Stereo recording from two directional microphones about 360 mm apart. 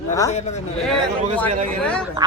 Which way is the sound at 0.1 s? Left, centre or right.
Centre.